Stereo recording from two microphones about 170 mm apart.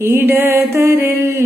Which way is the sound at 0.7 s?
15° right (ahead or behind).